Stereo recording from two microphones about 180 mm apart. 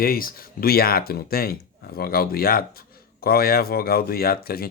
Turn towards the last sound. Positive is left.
turn(degrees=60)  # may be behind; listen again after turning